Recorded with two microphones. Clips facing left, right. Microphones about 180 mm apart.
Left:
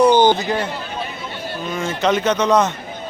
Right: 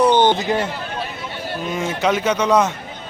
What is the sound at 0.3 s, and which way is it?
Speech, 25° right (ahead or behind).